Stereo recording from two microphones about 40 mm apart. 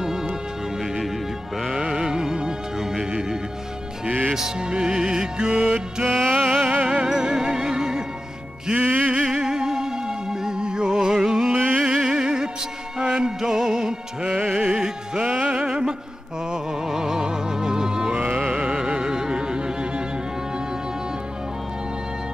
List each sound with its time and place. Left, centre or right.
1.7 s music: centre
6.0 s music: centre
6.7 s music: right
7.1 s music: centre
8.7 s music: right
9.1 s music: centre
14.5 s music: right
16.9 s music: centre
18.1 s music: right